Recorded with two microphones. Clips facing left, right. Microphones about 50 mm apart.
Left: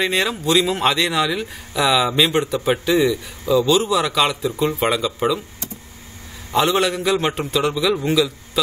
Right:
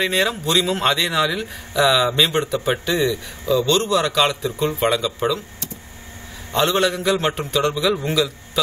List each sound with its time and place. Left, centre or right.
0.0 s a man's voice: centre
6.5 s a man's voice: centre